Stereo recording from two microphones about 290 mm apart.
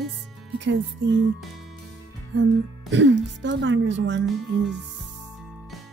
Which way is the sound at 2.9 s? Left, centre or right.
Right.